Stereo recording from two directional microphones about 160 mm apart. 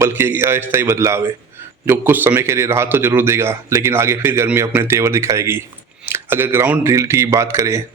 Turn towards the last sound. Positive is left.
turn(degrees=-20)  # may be behind; listen again after turning